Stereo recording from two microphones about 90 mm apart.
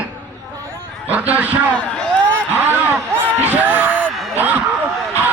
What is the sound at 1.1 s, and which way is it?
Speech, 15° right (ahead or behind).